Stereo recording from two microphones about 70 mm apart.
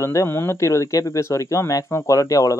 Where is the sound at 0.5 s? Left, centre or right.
Left.